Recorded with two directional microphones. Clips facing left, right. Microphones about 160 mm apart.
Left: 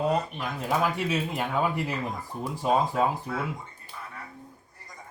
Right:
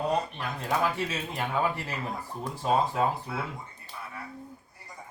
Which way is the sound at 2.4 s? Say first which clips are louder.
Left 2 dB; 10° left (ahead or behind).